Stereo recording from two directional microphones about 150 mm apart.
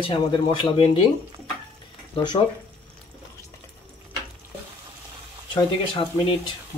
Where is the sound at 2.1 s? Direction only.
30° left (ahead or behind).